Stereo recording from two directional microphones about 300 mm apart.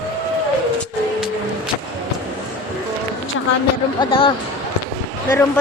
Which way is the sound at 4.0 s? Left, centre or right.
Centre.